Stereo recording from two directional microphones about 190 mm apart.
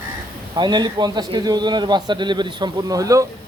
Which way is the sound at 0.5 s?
25° right (ahead or behind).